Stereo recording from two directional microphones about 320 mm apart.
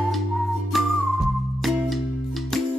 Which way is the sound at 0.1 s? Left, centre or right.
Centre.